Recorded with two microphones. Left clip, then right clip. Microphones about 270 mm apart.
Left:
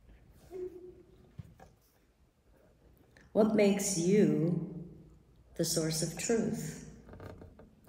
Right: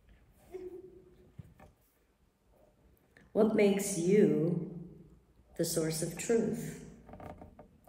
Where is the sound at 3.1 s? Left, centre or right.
Centre.